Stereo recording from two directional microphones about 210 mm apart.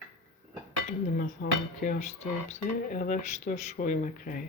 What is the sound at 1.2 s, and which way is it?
Speech, 40° left (ahead or behind).